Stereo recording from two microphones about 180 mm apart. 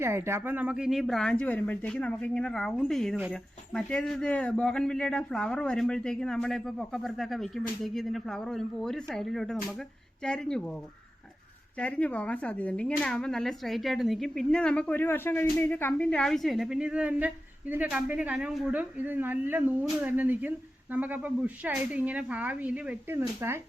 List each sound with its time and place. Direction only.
0.0 s speech: 15° right (ahead or behind); by 10.8 s 5° left (ahead or behind)
11.8 s a woman's voice: 5° left (ahead or behind); by 23.6 s 15° right (ahead or behind)